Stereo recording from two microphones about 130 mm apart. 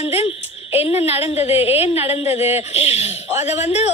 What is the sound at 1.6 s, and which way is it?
Speech, 50° left (ahead or behind).